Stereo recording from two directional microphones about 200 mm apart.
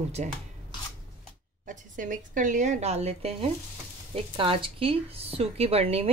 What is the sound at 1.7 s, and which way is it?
A woman's voice, 40° right (ahead or behind).